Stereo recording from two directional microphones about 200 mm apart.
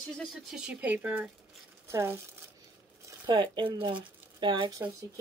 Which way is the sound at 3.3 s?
20° right (ahead or behind).